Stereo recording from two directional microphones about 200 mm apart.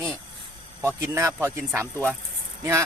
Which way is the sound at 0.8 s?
15° right (ahead or behind).